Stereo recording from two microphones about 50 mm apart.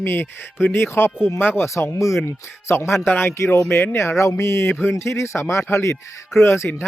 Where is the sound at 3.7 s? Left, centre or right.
Left.